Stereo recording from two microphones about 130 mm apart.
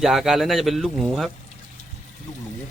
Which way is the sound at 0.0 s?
Centre (ahead or behind).